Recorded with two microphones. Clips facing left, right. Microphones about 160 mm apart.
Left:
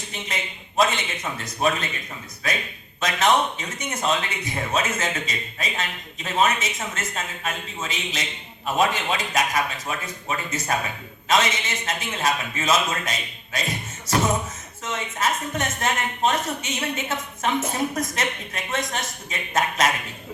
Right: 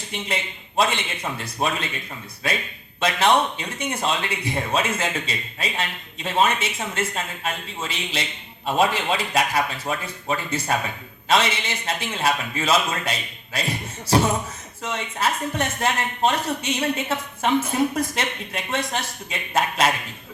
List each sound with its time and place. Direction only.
0.8 s a man's voice: 30° right (ahead or behind)
3.0 s a man's voice: 30° right (ahead or behind)